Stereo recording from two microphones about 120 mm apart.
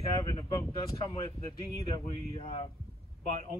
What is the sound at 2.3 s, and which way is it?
Speech, 45° left (ahead or behind).